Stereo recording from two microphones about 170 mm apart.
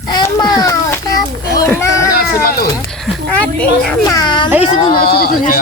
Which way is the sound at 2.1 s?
60° left (ahead or behind).